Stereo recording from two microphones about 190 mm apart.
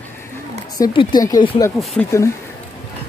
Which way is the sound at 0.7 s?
20° left (ahead or behind).